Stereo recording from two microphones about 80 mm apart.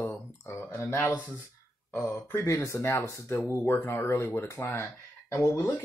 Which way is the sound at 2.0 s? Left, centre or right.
Left.